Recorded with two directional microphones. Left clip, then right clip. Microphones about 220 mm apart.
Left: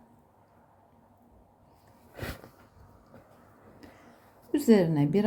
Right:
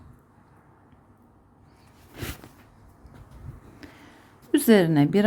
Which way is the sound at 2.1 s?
35° right (ahead or behind).